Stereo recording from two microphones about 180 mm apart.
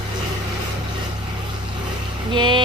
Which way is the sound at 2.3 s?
25° right (ahead or behind).